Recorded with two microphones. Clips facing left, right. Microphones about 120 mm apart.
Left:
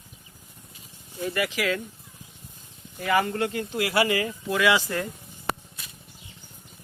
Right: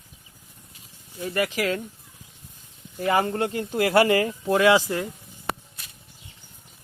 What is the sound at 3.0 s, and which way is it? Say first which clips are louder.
Speech: right 1 dB; 30° right (ahead or behind).